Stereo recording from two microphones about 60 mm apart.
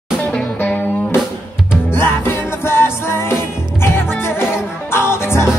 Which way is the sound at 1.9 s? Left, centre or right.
Left.